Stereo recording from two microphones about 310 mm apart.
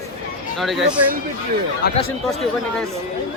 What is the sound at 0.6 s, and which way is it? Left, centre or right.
Speech, centre.